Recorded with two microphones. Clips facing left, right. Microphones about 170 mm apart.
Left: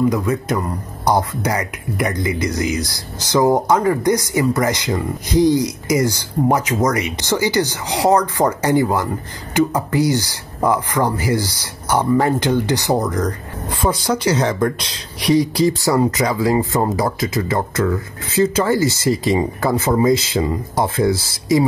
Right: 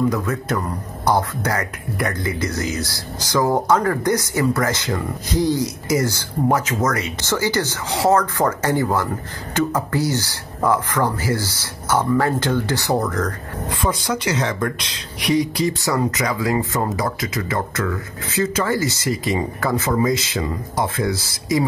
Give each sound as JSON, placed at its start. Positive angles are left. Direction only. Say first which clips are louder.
{"t": 0.1, "sound": "speech", "louder": "left 3 dB", "side_deg": 15}
{"t": 13.8, "sound": "speech", "louder": "left 5 dB", "side_deg": 35}